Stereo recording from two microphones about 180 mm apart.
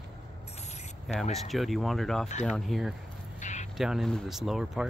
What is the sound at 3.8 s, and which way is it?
Speech, centre (ahead or behind).